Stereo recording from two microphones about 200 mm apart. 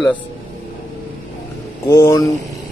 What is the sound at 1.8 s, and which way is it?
Speech, 15° left (ahead or behind).